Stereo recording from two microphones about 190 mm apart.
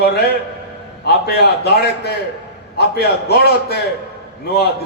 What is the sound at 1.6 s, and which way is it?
A man's voice, 60° left (ahead or behind).